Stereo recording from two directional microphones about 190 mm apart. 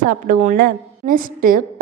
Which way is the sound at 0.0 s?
45° right (ahead or behind).